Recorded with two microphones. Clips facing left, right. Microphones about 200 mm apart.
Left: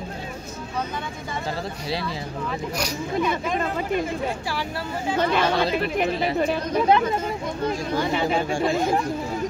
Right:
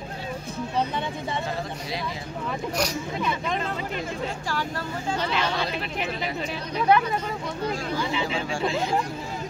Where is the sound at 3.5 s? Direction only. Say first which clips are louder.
Left 5 dB; 50° left (ahead or behind).